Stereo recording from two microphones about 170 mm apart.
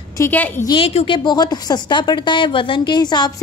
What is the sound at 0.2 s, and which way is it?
Speech, 10° left (ahead or behind).